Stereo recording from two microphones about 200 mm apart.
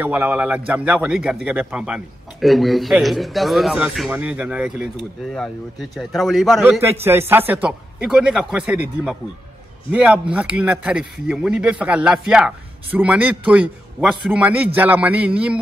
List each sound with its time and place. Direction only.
0.0 s speech: 10° right (ahead or behind)
6.8 s speech: 10° right (ahead or behind)